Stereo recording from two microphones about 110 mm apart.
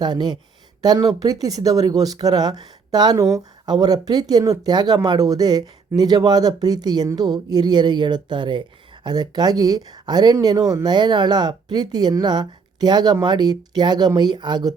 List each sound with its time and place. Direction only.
0.0 s speech: 40° right (ahead or behind)